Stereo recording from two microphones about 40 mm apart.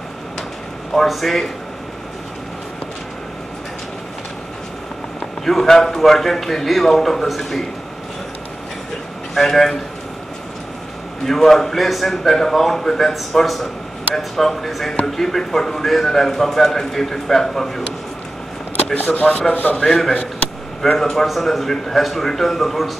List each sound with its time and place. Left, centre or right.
1.0 s a man's voice: centre
5.4 s a man's voice: centre
9.3 s a man's voice: centre
11.2 s a man's voice: centre
18.9 s a man's voice: left
19.8 s a man's voice: centre
21.3 s a man's voice: centre